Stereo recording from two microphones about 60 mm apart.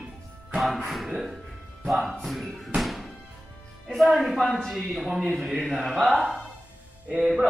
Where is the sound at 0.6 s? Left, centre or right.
Centre.